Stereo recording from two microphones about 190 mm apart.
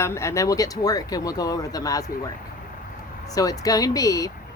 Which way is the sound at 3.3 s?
20° left (ahead or behind).